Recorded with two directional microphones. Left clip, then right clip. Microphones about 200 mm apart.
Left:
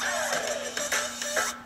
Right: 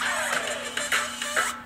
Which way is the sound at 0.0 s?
15° left (ahead or behind).